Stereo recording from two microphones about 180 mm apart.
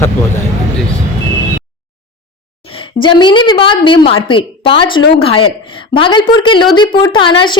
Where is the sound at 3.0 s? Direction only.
25° left (ahead or behind).